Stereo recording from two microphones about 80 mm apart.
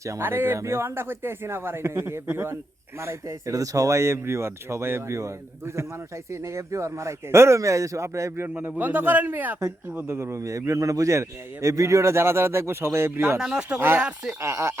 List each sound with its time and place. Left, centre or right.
0.2 s a man's voice: right
8.8 s speech: right
10.2 s a man's voice: right
13.4 s speech: centre
13.7 s a man's voice: right